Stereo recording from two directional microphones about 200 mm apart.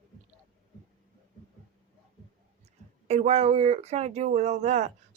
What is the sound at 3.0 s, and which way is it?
Speech, 30° right (ahead or behind).